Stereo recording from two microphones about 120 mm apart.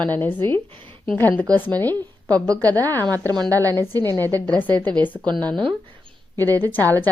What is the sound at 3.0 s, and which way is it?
Speech, 30° right (ahead or behind).